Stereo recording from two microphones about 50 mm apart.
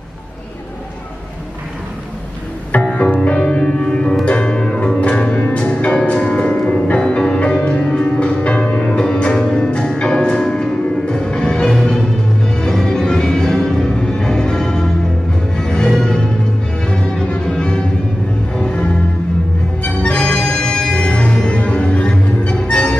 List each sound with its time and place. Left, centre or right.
2.7 s music: left
5.9 s music: centre
11.7 s music: centre
12.8 s music: centre